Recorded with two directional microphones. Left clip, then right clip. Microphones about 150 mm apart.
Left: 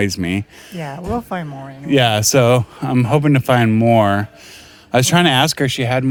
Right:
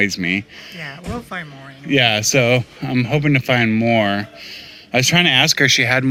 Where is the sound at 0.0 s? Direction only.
45° left (ahead or behind).